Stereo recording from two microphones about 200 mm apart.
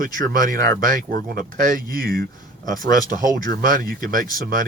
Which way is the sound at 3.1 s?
20° left (ahead or behind).